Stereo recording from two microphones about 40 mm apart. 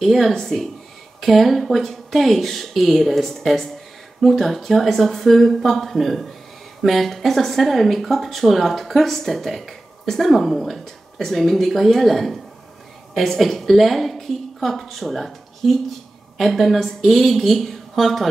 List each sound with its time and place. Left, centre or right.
0.0 s a woman's voice: centre